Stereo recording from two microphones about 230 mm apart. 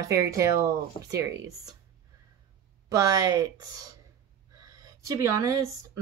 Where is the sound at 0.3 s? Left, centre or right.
Centre.